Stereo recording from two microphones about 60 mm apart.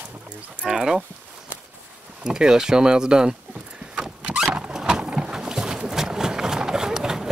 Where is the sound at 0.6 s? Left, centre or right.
Centre.